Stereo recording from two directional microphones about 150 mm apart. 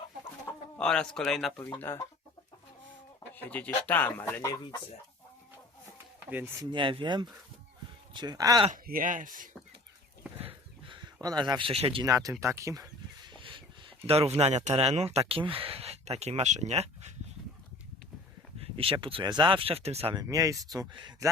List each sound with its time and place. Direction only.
0.8 s speech: 5° left (ahead or behind)
1.8 s speech: 15° left (ahead or behind)
3.3 s speech: 10° left (ahead or behind)
6.3 s speech: 15° right (ahead or behind)
6.7 s speech: 35° right (ahead or behind)
8.7 s speech: 65° right (ahead or behind)
10.3 s a sound: 35° right (ahead or behind)
12.0 s speech: 20° right (ahead or behind); by 17.1 s 45° right (ahead or behind)
18.6 s speech: 40° right (ahead or behind)
20.2 s speech: 20° right (ahead or behind)